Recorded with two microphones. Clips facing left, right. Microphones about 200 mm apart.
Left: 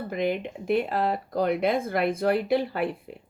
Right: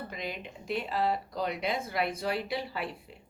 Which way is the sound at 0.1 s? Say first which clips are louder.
Left 12 dB; 55° left (ahead or behind).